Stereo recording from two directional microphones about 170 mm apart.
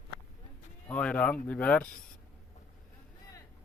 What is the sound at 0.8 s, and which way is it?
Speech, 5° left (ahead or behind).